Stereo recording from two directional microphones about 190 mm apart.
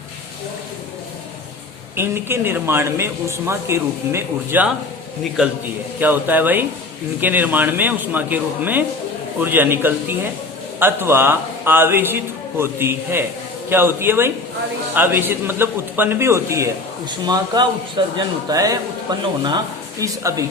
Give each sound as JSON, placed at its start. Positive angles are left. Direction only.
{"t": 2.0, "sound": "a man's voice", "side_deg": -10}
{"t": 20.0, "sound": "a man's voice", "side_deg": -15}